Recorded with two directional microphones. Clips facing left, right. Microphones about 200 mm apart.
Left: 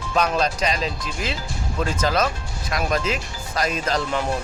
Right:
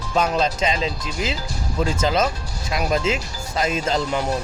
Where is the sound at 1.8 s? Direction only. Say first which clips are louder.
Right 1 dB; 25° right (ahead or behind).